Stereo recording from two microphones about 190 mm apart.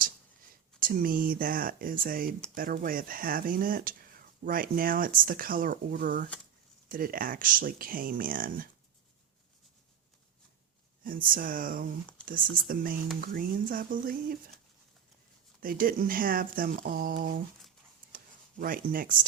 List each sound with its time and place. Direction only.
0.8 s speech: 50° right (ahead or behind)
11.0 s speech: 45° right (ahead or behind)
15.6 s speech: 50° right (ahead or behind)
18.1 s a sound: 50° right (ahead or behind)